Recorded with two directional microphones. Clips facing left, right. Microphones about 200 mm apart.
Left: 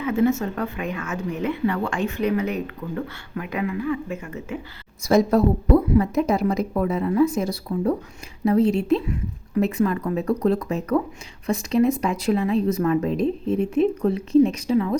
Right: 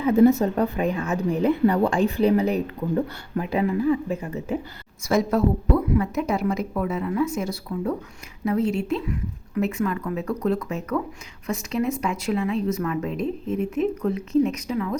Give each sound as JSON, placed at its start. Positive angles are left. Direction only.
{"t": 0.0, "sound": "speech", "side_deg": -35}
{"t": 5.0, "sound": "speech", "side_deg": 35}